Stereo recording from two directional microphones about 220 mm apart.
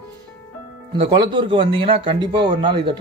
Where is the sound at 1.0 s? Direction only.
20° right (ahead or behind).